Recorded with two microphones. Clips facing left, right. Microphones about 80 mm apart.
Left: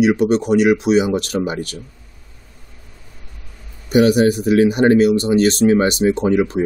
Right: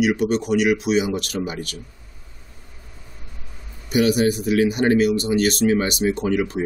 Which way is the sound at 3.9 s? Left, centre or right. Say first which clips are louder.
Left 5 dB; left.